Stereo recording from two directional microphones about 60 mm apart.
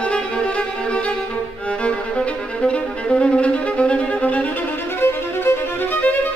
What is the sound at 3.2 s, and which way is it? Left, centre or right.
Violin, centre.